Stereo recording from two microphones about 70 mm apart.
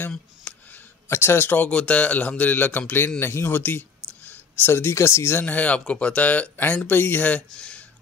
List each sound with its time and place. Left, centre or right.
0.5 s a sound: centre
1.0 s speech: left
1.7 s speech: centre
3.2 s speech: left; by 7.8 s centre